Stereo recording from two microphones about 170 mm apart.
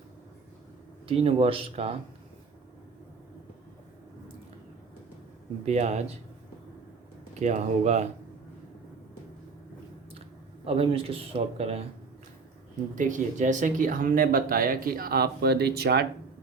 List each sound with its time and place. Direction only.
1.0 s speech: 35° right (ahead or behind)
5.6 s speech: 40° right (ahead or behind)
7.3 s speech: 40° right (ahead or behind)
10.7 s speech: 35° right (ahead or behind)
13.0 s speech: 50° right (ahead or behind); by 16.0 s 70° right (ahead or behind)